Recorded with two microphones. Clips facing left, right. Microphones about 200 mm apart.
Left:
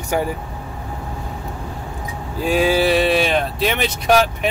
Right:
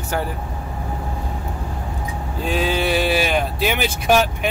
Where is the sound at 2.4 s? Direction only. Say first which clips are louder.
Left 5 dB; 10° left (ahead or behind).